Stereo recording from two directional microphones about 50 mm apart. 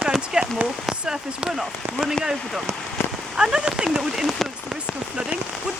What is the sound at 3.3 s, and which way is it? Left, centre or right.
Rain on surface, centre.